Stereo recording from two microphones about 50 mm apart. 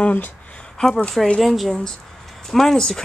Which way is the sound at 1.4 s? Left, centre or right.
Centre.